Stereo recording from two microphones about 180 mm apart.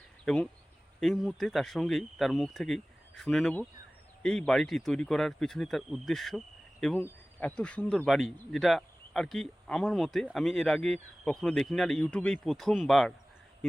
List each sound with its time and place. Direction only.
0.9 s speech: centre (ahead or behind)